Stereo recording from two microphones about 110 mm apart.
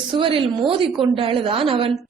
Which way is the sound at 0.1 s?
55° right (ahead or behind).